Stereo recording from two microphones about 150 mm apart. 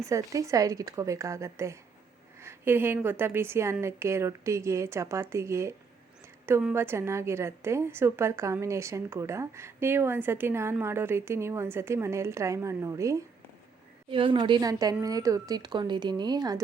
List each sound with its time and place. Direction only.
0.0 s a woman's voice: 20° right (ahead or behind)
6.4 s a sound: 15° right (ahead or behind)
6.7 s a woman's voice: 15° right (ahead or behind)
14.1 s a woman's voice: 35° right (ahead or behind)